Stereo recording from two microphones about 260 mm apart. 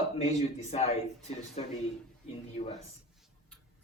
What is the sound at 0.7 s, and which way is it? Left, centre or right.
Speech, left.